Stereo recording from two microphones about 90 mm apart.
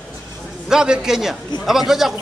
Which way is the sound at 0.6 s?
10° right (ahead or behind).